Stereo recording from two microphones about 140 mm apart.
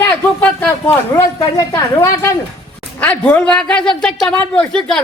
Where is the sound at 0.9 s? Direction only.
25° left (ahead or behind).